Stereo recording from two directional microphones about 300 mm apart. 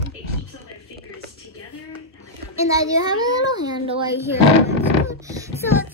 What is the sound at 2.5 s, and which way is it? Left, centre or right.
A child's voice, centre.